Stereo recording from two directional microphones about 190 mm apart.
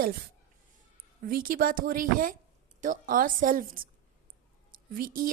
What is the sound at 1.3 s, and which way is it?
A woman's voice, 50° right (ahead or behind).